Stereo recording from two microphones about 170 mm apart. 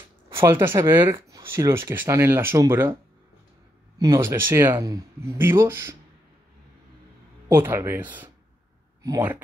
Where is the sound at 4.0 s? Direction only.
20° right (ahead or behind).